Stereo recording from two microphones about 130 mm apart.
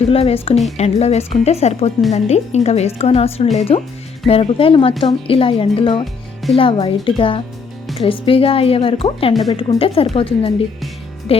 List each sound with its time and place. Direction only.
0.1 s a woman's voice: 50° left (ahead or behind)